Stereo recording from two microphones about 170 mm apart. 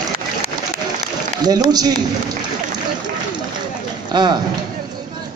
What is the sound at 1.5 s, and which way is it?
Speech, 25° right (ahead or behind).